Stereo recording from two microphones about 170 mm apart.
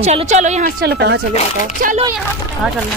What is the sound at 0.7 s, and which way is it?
Speech, 80° right.